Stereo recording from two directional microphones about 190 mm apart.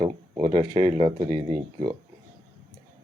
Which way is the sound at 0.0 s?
25° right (ahead or behind).